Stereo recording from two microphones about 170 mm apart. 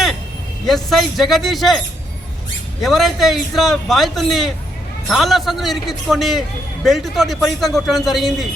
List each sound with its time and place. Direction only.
0.6 s a man's voice: centre (ahead or behind)
2.8 s a man's voice: centre (ahead or behind)